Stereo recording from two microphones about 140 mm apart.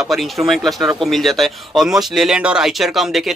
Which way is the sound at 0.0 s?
Centre (ahead or behind).